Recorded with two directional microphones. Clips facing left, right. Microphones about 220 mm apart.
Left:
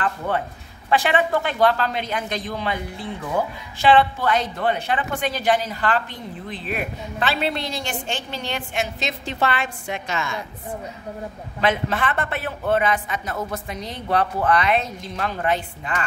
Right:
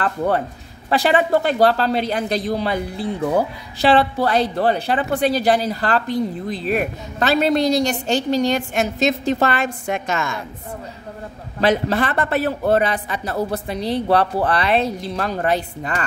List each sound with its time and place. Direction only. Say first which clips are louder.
0.8 s speech: right 3 dB; 35° right (ahead or behind)
11.6 s speech: right 4 dB; 35° right (ahead or behind)